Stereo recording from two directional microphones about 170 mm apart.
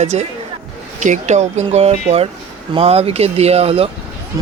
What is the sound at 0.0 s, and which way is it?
Speech, 40° right (ahead or behind).